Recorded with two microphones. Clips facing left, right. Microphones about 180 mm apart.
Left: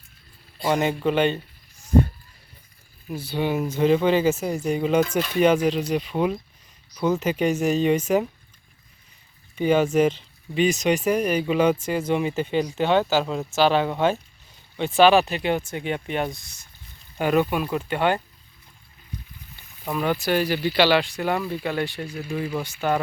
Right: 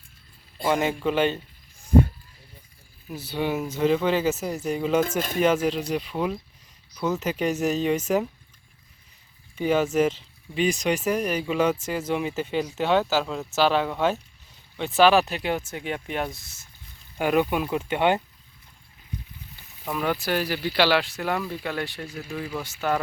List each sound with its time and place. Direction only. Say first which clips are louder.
0.8 s speech: left 4 dB; 5° right (ahead or behind)
3.2 s speech: left 2 dB; 5° right (ahead or behind)
9.6 s speech: left 3 dB; centre (ahead or behind); by 18.2 s 20° right (ahead or behind)
19.8 s speech: left 2 dB; centre (ahead or behind)